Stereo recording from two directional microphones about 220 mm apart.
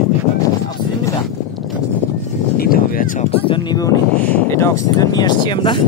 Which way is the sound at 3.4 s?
20° left (ahead or behind).